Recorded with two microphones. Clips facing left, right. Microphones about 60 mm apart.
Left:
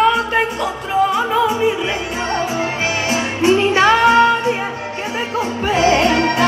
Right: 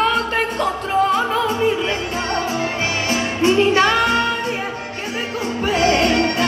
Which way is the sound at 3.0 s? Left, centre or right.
Centre.